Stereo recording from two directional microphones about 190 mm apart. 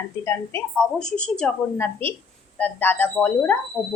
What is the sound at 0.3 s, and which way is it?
A woman's voice, 10° left (ahead or behind).